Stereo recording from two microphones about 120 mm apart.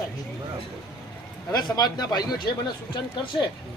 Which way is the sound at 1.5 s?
35° left (ahead or behind).